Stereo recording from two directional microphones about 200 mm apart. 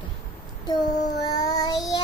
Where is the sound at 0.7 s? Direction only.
20° left (ahead or behind).